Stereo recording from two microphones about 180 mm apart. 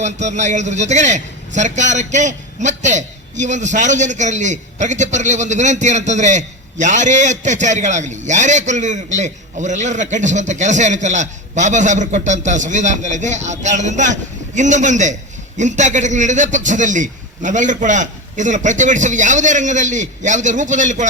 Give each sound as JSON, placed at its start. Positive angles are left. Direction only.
{"t": 0.0, "sound": "a man's voice", "side_deg": -40}